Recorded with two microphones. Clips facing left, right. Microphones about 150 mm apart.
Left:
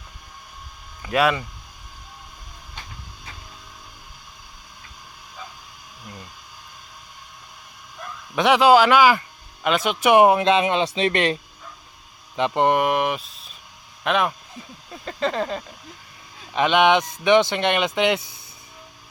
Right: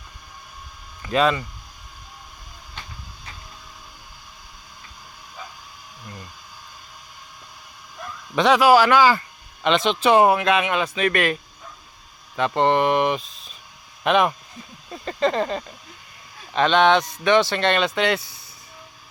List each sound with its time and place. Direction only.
1.0 s speech: 10° left (ahead or behind)
8.4 s speech: 15° left (ahead or behind)
12.5 s mantra: 10° left (ahead or behind)
16.5 s speech: 15° left (ahead or behind)